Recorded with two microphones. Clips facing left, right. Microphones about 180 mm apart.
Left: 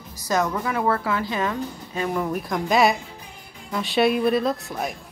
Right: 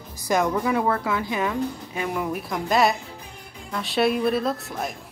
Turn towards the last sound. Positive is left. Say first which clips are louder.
# left 2 dB
turn(degrees=0)  # may be behind; listen again after turning